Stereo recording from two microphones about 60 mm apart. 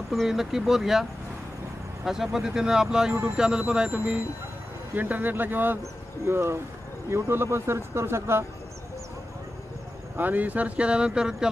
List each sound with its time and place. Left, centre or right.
0.1 s speech: centre
2.0 s speech: centre; by 5.8 s right
6.2 s speech: right
10.1 s speech: right; by 11.4 s centre